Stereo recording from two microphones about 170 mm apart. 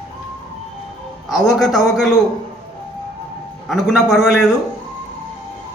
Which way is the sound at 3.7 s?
Centre (ahead or behind).